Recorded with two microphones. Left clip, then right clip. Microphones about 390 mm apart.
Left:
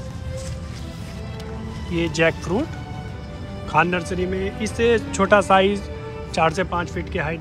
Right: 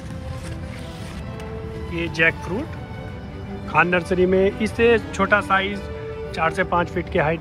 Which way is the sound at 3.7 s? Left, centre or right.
Centre.